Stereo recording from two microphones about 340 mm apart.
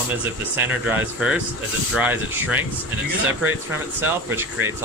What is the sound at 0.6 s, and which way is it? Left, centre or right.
Speech, centre.